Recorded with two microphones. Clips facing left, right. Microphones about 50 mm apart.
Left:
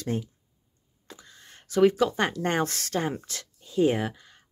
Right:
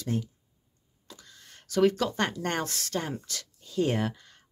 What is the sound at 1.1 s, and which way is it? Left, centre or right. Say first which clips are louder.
Speech: left 2 dB; left.